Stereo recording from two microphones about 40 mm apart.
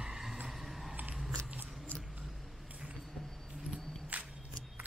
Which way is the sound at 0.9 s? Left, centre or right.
Right.